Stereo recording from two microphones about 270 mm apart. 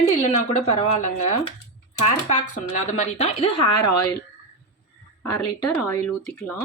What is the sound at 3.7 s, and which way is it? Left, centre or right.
Speech, left.